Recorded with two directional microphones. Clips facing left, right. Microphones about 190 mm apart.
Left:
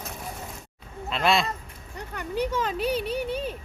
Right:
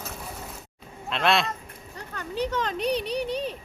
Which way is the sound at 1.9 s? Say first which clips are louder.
Left 2 dB; 15° left (ahead or behind).